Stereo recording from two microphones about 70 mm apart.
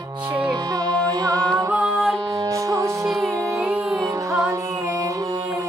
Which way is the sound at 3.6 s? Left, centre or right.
Centre.